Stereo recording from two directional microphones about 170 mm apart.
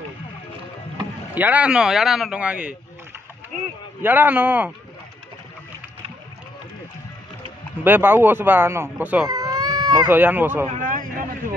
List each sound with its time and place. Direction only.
1.3 s speech: 10° right (ahead or behind)
4.0 s speech: 10° right (ahead or behind)
7.8 s speech: 10° right (ahead or behind)
9.3 s cat: 20° right (ahead or behind)
10.0 s speech: 10° right (ahead or behind)
10.7 s a sound: 50° right (ahead or behind)